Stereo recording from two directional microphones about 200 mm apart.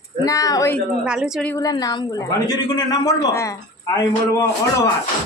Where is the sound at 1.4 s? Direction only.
15° left (ahead or behind).